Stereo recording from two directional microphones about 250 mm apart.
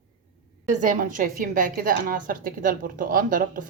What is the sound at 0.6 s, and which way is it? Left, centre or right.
A woman's voice, right.